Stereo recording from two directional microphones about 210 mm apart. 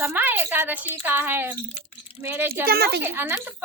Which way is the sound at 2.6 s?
45° right (ahead or behind).